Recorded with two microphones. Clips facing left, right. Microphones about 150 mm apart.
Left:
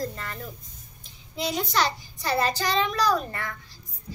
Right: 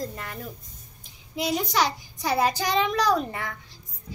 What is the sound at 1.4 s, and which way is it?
A child's voice, 10° right (ahead or behind).